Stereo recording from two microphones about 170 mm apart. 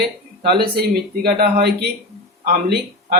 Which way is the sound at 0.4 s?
65° right (ahead or behind).